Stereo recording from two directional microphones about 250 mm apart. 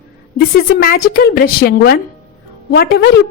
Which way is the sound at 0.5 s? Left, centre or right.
Left.